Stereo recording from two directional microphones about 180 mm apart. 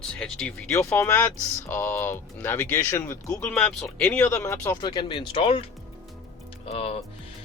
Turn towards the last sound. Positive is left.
turn(degrees=35)  # may be behind; listen again after turning